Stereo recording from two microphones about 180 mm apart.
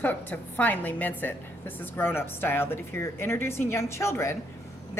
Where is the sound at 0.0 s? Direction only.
10° left (ahead or behind).